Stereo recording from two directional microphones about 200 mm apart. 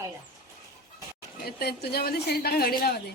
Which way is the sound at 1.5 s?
50° left (ahead or behind).